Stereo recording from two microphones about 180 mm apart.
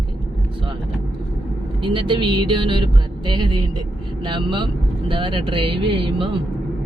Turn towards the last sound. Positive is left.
turn(degrees=-30)  # may be behind; listen again after turning